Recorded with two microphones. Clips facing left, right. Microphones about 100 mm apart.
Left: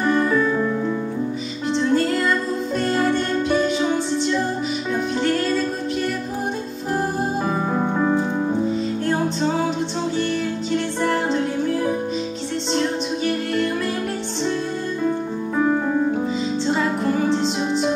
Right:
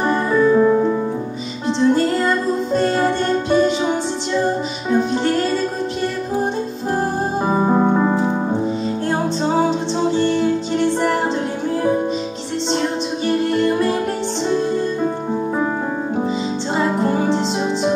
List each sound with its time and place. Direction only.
0.0 s music: 30° right (ahead or behind)
1.7 s music: 25° right (ahead or behind)
7.4 s music: 20° right (ahead or behind)
9.7 s music: 25° right (ahead or behind)
13.2 s music: 25° right (ahead or behind)
16.7 s music: 25° right (ahead or behind)